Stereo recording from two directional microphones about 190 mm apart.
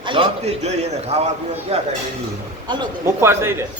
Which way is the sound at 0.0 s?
25° right (ahead or behind).